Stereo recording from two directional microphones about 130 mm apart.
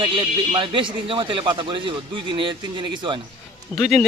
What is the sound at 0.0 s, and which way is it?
Speech, 40° right (ahead or behind).